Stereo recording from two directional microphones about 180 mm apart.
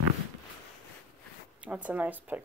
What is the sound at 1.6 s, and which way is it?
Speech, 10° right (ahead or behind).